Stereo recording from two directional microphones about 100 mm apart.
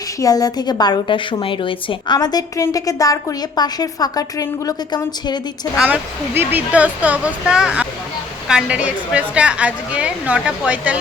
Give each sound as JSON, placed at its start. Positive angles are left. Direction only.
{"t": 0.2, "sound": "a woman's voice", "side_deg": 35}
{"t": 2.1, "sound": "a woman's voice", "side_deg": 40}
{"t": 5.7, "sound": "a woman's voice", "side_deg": -10}